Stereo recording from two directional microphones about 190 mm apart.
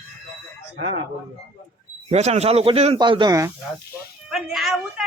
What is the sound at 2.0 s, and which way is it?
Speech, 35° right (ahead or behind).